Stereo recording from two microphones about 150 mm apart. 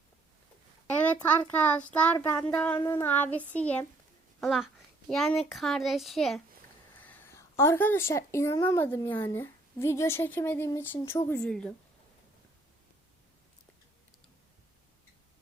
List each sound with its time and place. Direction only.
1.4 s a woman's voice: 10° left (ahead or behind)
7.0 s speech: 15° left (ahead or behind)